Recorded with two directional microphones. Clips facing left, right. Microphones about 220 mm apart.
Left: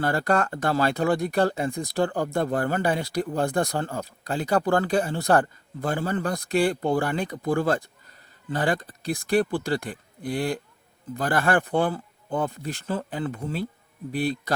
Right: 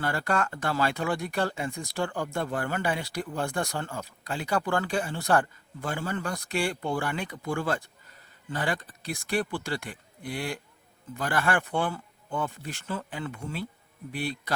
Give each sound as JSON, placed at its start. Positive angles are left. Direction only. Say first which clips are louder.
{"t": 0.0, "sound": "speech", "louder": "left 5 dB", "side_deg": 40}